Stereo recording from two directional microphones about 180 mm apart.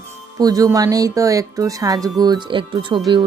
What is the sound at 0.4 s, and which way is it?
Speech, 20° right (ahead or behind).